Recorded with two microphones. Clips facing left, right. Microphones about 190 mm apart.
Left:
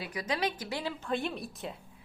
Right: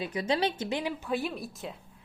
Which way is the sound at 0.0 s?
25° right (ahead or behind).